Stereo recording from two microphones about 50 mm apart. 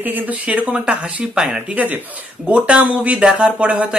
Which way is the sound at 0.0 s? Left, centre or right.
Right.